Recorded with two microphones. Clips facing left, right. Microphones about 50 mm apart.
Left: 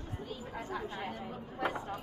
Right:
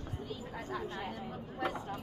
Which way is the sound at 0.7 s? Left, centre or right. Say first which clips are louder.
Even; centre.